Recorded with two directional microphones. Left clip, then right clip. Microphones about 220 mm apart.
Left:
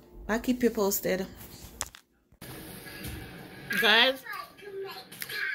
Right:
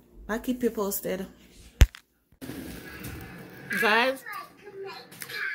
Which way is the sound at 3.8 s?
10° right (ahead or behind).